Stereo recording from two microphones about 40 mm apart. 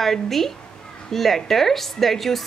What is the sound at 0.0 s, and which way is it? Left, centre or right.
Speech, centre.